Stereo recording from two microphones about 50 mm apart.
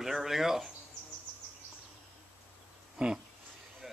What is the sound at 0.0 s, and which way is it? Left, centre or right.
Speech, centre.